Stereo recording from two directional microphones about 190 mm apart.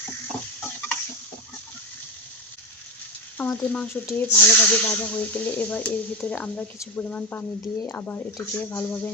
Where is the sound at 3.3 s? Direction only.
10° left (ahead or behind).